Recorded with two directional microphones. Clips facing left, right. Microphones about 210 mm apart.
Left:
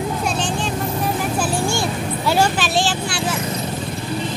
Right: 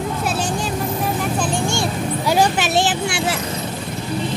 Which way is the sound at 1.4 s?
5° left (ahead or behind).